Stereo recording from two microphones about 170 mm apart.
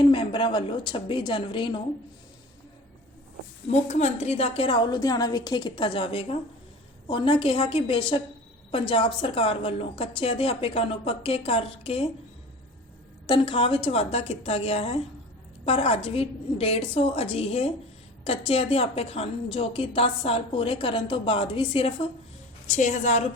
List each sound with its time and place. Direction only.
0.0 s a woman's voice: 30° left (ahead or behind)
3.7 s a woman's voice: 40° left (ahead or behind)
13.2 s a woman's voice: 30° left (ahead or behind)
22.6 s a woman's voice: 45° left (ahead or behind)